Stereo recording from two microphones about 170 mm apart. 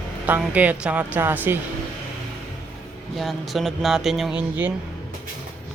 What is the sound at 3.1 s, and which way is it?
Speech, centre (ahead or behind).